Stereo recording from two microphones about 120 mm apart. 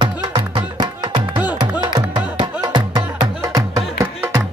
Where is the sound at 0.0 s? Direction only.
40° right (ahead or behind).